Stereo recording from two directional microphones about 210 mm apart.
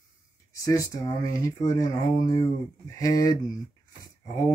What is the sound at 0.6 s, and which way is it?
Speech, 15° left (ahead or behind).